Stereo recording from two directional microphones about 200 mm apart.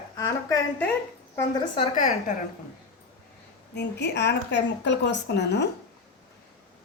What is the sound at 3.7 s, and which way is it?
A woman's voice, 60° left (ahead or behind).